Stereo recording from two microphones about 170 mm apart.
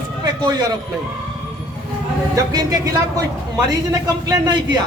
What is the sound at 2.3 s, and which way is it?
A man's voice, 20° right (ahead or behind).